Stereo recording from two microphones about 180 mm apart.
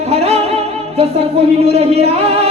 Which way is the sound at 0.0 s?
35° right (ahead or behind).